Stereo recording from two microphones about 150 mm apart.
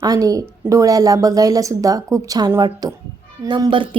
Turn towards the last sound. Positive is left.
turn(degrees=-30)  # may be behind; listen again after turning